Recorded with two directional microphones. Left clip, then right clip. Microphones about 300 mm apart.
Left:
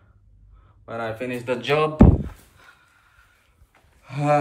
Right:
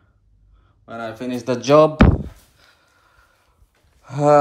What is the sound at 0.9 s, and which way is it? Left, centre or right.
Speech, centre.